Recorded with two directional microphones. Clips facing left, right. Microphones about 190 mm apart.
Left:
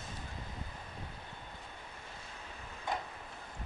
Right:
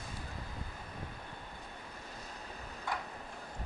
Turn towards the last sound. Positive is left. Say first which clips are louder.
# left 2 dB
turn(degrees=20)  # may be behind; listen again after turning